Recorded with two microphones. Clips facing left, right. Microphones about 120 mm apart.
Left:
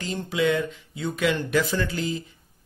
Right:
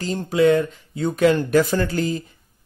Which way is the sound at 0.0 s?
40° right (ahead or behind).